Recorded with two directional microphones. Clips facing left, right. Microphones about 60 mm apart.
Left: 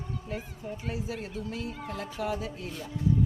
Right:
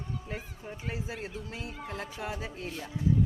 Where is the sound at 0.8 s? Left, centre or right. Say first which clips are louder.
Left 1 dB; right.